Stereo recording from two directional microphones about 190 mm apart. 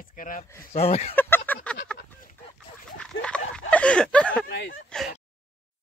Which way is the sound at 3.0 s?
5° left (ahead or behind).